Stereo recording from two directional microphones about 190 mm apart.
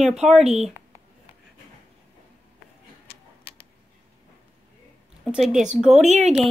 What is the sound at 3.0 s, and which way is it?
Tick-tock, 55° left (ahead or behind).